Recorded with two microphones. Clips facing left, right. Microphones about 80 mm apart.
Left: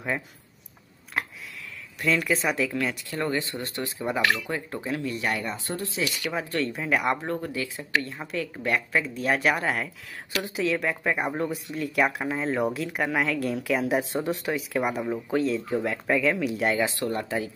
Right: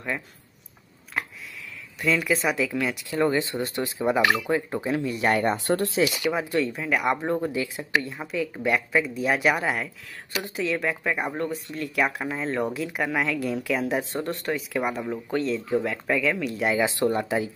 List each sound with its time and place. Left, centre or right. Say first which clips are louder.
1.1 s a sound: even; centre
2.0 s speech: right 1 dB; centre
3.3 s speech: right 4 dB; centre
5.2 s speech: right 7 dB; right
6.0 s speech: right 4 dB; centre
6.7 s speech: right 1 dB; centre
7.2 s speech: right 4 dB; right; by 16.7 s centre
16.8 s speech: right 4 dB; right